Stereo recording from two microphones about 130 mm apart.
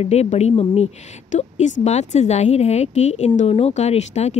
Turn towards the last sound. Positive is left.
turn(degrees=60)  # may be behind; listen again after turning